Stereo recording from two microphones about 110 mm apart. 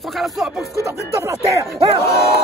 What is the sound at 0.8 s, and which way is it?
Speech, 25° right (ahead or behind).